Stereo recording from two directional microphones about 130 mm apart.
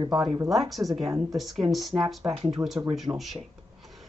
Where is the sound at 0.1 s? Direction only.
5° right (ahead or behind).